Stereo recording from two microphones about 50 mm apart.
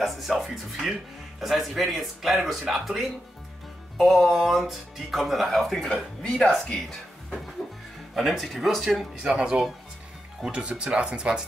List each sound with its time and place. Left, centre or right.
0.0 s speech: centre
6.7 s speech: centre
8.1 s speech: centre
9.2 s speech: centre